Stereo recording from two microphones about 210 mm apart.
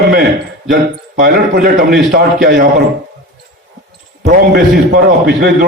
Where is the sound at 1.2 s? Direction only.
50° right (ahead or behind).